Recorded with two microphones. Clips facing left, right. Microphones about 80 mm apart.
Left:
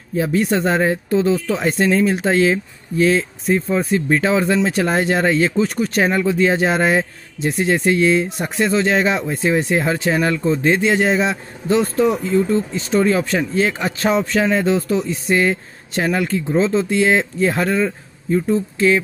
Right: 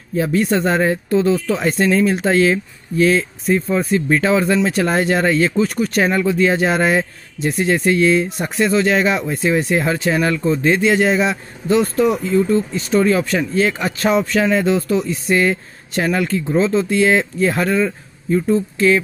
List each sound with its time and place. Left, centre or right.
0.1 s speech: centre